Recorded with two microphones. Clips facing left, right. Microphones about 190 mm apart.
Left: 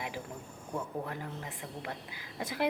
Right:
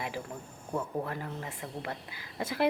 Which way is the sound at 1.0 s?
10° left (ahead or behind).